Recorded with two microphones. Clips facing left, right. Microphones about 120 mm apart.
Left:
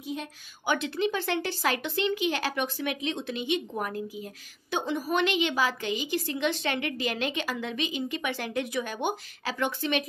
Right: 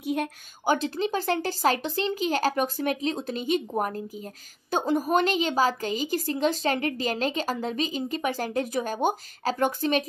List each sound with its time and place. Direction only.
0.0 s speech: 60° right (ahead or behind)
0.7 s speech: 35° right (ahead or behind)